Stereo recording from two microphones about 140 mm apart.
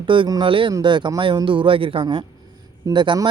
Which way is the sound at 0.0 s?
35° right (ahead or behind).